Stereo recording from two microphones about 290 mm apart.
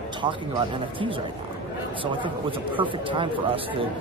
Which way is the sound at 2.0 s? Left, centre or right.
Centre.